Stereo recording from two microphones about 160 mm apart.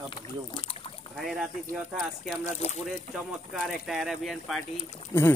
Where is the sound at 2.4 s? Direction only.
45° left (ahead or behind).